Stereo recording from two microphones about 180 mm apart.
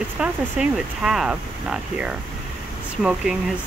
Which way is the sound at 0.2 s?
5° right (ahead or behind).